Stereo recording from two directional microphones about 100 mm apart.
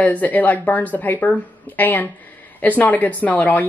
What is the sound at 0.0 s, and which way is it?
Speech, 15° left (ahead or behind).